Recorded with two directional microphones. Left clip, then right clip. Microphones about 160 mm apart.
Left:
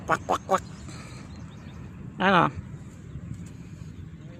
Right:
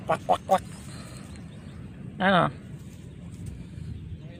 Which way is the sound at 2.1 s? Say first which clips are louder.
Left 1 dB; 15° left (ahead or behind).